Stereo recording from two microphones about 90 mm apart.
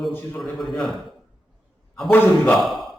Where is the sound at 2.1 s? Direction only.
25° left (ahead or behind).